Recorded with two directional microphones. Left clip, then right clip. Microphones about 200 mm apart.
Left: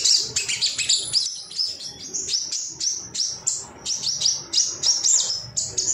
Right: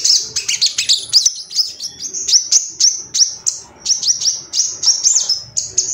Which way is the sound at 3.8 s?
20° right (ahead or behind).